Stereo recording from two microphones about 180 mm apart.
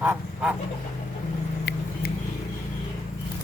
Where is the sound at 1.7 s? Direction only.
70° left (ahead or behind).